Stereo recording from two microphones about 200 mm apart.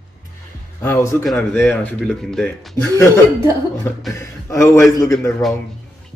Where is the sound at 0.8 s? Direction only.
10° left (ahead or behind).